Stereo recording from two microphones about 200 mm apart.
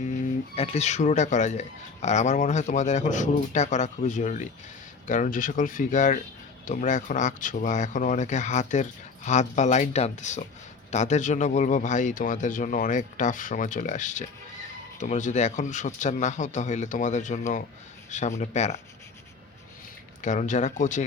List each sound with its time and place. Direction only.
0.5 s speech: 30° left (ahead or behind)
20.2 s speech: 40° left (ahead or behind)